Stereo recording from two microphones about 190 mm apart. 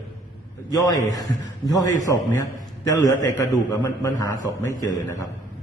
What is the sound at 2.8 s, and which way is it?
A man's voice, 15° left (ahead or behind).